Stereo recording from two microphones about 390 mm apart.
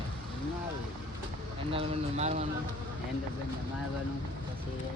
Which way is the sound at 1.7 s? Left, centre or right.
Centre.